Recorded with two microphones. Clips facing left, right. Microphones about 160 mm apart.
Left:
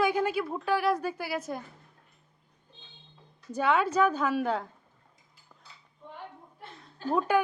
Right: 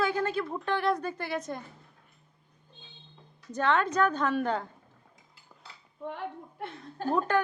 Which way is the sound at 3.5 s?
10° left (ahead or behind).